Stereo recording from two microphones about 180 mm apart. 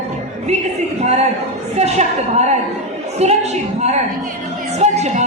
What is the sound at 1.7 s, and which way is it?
A woman's voice, 35° right (ahead or behind).